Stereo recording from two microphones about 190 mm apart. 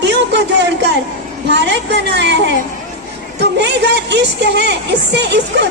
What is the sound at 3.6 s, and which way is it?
Speech, 65° right (ahead or behind).